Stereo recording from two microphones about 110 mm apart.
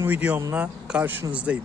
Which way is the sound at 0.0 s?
15° right (ahead or behind).